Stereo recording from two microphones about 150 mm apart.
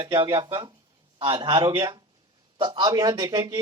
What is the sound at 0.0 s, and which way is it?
A man's voice, 25° right (ahead or behind).